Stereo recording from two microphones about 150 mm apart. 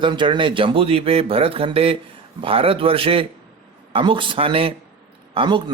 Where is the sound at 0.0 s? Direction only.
30° right (ahead or behind).